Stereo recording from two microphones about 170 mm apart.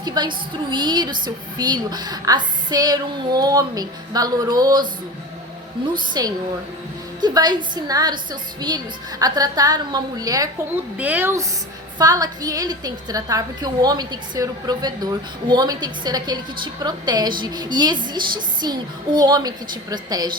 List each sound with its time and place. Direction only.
0.0 s a woman's voice: 25° right (ahead or behind)
6.2 s a woman's voice: 20° right (ahead or behind)
10.9 s a woman's voice: 10° right (ahead or behind)